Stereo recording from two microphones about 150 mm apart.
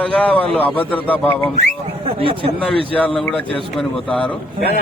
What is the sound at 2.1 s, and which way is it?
Speech, 35° right (ahead or behind).